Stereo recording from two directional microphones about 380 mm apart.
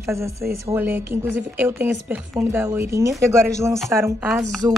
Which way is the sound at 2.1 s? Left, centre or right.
Centre.